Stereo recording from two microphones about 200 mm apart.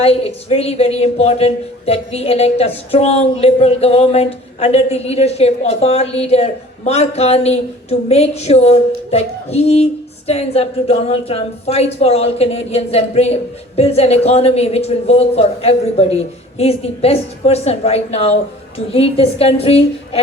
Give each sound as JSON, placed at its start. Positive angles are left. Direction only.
{"t": 0.0, "sound": "a woman's voice", "side_deg": 30}